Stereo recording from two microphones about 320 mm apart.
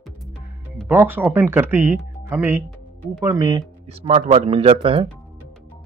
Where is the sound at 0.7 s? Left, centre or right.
Centre.